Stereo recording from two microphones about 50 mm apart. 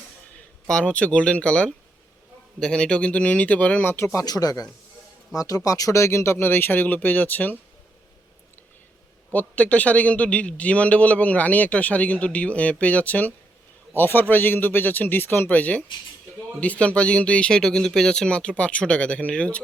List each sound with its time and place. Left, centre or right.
0.7 s a man's voice: centre
3.9 s speech: left
5.3 s speech: left
6.4 s speech: left
9.3 s a man's voice: left
13.9 s a man's voice: left